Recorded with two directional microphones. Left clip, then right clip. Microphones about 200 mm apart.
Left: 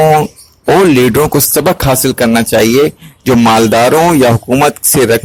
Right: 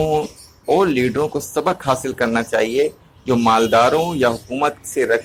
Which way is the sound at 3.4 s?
40° left (ahead or behind).